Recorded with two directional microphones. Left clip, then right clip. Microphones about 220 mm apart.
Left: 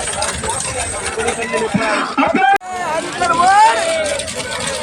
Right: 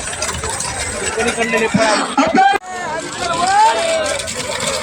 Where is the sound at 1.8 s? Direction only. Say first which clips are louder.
Right 1 dB; 45° right (ahead or behind).